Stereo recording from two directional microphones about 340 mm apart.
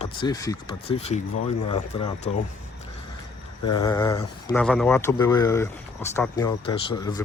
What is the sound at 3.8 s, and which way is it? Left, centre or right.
Speech, centre.